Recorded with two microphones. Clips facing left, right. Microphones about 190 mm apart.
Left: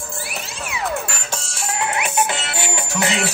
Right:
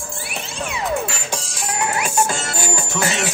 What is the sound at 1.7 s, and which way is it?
Music, 20° left (ahead or behind).